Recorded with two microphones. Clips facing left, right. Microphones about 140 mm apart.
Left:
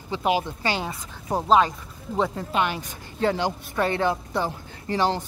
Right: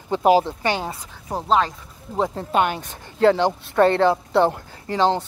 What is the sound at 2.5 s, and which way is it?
Speech, 45° right (ahead or behind).